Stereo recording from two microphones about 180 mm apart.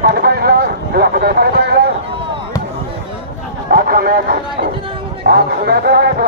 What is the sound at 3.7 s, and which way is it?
Speech, 55° right (ahead or behind).